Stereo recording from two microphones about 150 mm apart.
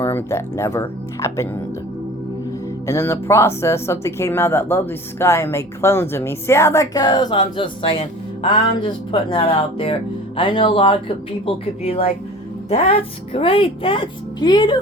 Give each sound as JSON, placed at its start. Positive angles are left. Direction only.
{"t": 0.0, "sound": "speech", "side_deg": 15}
{"t": 2.8, "sound": "speech", "side_deg": 20}